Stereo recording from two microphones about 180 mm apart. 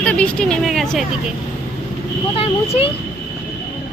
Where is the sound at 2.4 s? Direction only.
30° left (ahead or behind).